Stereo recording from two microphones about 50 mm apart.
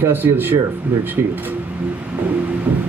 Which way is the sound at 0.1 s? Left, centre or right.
Right.